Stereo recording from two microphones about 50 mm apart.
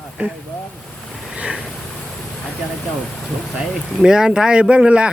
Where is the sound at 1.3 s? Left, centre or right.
Right.